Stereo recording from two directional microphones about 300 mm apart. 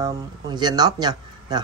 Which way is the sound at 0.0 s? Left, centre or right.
Centre.